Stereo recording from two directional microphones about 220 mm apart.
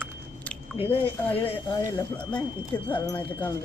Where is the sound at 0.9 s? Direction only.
10° left (ahead or behind).